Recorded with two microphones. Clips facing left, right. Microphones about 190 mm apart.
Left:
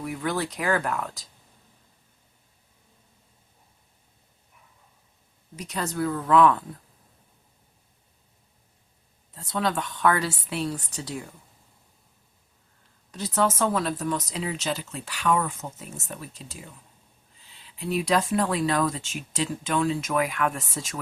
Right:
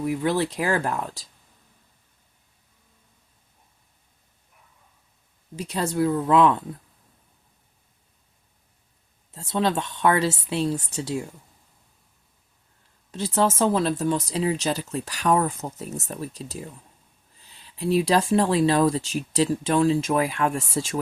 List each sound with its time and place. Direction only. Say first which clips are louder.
0.0 s a woman's voice: right 5 dB; 25° right (ahead or behind)
5.5 s a woman's voice: right 5 dB; 30° right (ahead or behind)
9.3 s a woman's voice: right 3 dB; 25° right (ahead or behind)
13.1 s speech: right 2 dB; 25° right (ahead or behind)
17.7 s speech: right 4 dB; 30° right (ahead or behind)